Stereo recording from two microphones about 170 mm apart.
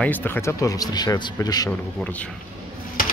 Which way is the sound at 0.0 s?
10° left (ahead or behind).